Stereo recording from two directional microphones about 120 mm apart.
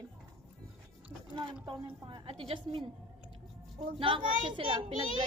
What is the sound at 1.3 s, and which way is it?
Speech, 40° right (ahead or behind).